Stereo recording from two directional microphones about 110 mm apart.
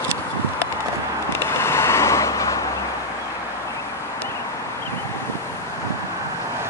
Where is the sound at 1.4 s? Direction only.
25° left (ahead or behind).